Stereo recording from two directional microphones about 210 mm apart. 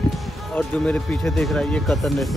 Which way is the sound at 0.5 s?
5° left (ahead or behind).